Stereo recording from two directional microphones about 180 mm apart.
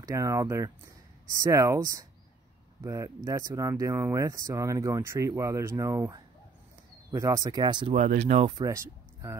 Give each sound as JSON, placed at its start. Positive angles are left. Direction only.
{"t": 0.0, "sound": "speech", "side_deg": -15}
{"t": 7.9, "sound": "speech", "side_deg": -40}
{"t": 8.5, "sound": "speech", "side_deg": -20}